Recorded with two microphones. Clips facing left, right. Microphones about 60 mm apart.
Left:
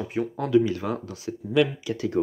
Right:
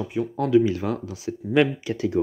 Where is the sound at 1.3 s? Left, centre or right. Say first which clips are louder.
Right 2 dB; right.